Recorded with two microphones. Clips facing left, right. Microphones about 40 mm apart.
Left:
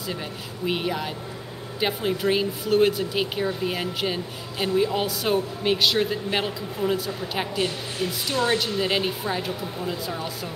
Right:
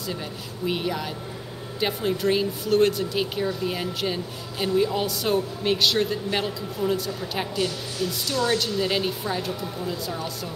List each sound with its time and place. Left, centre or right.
0.7 s a woman's voice: centre